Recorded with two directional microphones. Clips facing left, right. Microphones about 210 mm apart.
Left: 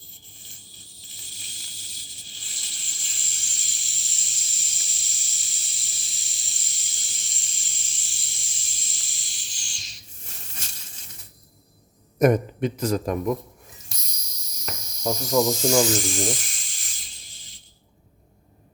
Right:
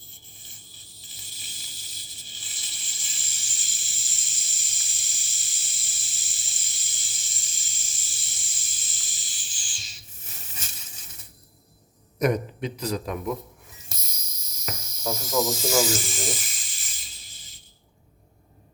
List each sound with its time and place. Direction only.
1.0 s snake: centre (ahead or behind)
10.5 s a sound: 5° right (ahead or behind)
12.2 s a man's voice: 50° left (ahead or behind)
13.8 s snake: centre (ahead or behind)